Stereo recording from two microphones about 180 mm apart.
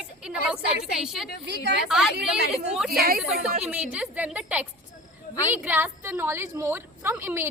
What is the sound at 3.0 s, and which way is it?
Speech, 55° right (ahead or behind).